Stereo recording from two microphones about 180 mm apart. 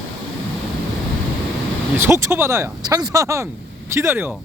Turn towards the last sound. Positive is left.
turn(degrees=-10)  # may be behind; listen again after turning